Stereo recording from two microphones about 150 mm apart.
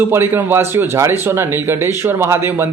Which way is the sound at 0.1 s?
15° right (ahead or behind).